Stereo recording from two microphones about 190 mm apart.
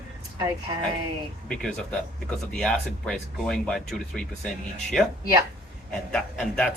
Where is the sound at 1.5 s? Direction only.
5° left (ahead or behind).